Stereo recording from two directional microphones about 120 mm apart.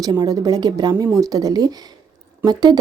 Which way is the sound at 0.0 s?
35° right (ahead or behind).